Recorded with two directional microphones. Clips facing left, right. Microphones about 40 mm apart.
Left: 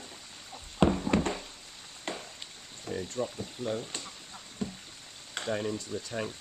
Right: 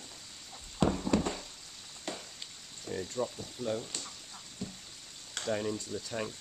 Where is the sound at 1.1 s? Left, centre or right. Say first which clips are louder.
Left 2 dB; left.